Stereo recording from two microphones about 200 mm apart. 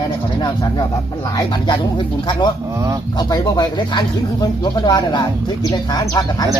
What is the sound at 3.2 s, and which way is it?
Speech, 20° left (ahead or behind).